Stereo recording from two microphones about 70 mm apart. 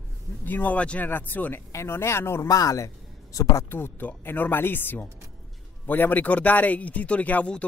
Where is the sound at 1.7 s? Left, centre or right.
Left.